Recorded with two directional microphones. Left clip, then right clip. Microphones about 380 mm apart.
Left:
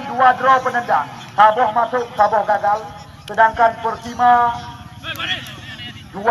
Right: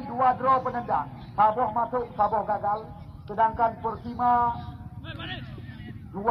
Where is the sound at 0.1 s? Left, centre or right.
Left.